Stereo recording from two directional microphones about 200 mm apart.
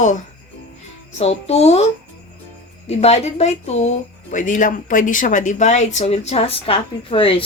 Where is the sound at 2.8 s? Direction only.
30° left (ahead or behind).